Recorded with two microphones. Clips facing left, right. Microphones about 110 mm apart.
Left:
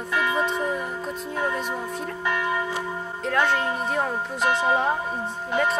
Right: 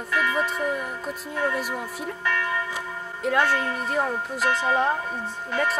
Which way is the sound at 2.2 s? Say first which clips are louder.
Left 2 dB; 20° left (ahead or behind).